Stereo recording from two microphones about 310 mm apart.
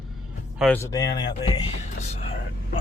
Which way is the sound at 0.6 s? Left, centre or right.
Centre.